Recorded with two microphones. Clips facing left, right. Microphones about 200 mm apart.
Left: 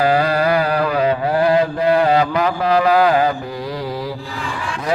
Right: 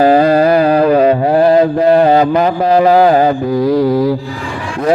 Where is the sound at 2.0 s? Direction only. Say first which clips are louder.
Right 6 dB; 35° right (ahead or behind).